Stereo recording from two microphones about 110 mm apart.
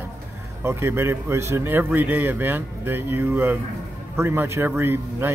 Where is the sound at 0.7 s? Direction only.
20° right (ahead or behind).